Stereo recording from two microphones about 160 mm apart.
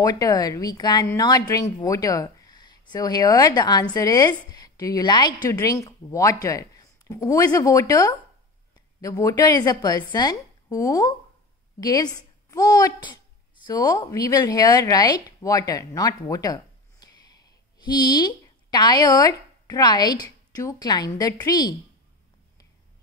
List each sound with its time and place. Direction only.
0.0 s a woman's voice: 20° left (ahead or behind)